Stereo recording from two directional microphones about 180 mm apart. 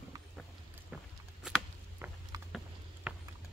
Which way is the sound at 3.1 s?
5° right (ahead or behind).